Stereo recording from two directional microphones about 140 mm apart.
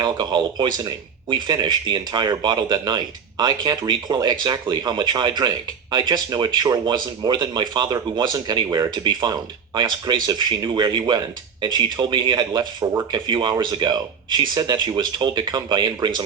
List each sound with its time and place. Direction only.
0.0 s speech: 30° right (ahead or behind)